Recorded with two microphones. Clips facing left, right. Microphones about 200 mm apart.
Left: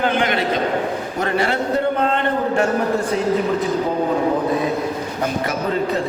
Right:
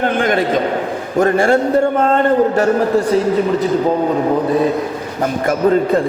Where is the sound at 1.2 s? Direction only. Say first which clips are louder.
Right 8 dB; 50° right (ahead or behind).